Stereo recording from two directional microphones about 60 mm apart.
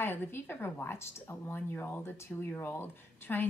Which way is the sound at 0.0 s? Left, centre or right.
Left.